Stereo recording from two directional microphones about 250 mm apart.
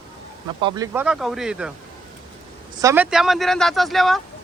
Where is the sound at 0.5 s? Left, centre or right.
Centre.